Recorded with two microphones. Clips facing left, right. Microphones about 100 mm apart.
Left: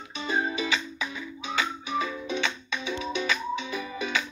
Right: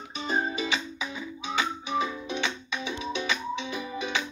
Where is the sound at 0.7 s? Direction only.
20° right (ahead or behind).